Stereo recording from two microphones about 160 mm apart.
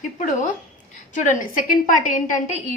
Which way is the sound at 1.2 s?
55° left (ahead or behind).